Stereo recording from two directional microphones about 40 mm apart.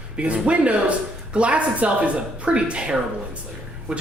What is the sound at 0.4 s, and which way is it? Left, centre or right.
Speech, right.